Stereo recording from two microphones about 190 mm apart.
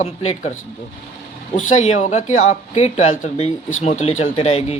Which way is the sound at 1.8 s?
35° left (ahead or behind).